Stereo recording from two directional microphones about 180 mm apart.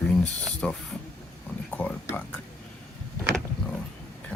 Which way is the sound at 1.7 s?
10° left (ahead or behind).